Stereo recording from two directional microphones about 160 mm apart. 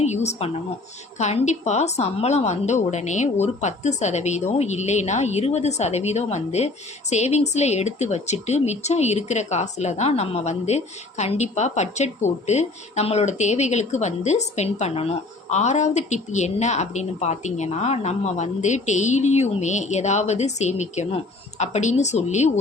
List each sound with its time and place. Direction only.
0.0 s a woman's voice: 45° left (ahead or behind)